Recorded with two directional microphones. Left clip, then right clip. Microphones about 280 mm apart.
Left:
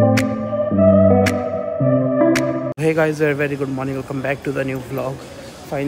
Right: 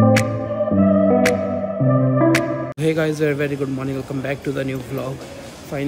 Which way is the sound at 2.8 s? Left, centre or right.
Centre.